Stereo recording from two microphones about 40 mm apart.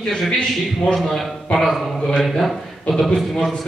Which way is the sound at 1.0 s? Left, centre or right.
Centre.